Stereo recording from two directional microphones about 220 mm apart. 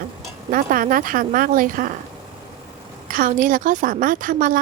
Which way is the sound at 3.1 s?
40° right (ahead or behind).